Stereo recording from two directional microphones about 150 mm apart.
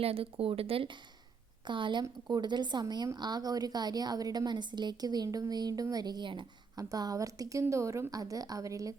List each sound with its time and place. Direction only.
0.0 s a woman's voice: 40° right (ahead or behind); by 9.0 s 20° right (ahead or behind)